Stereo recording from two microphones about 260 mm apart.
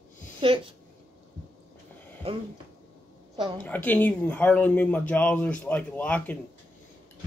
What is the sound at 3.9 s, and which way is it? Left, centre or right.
Speech, centre.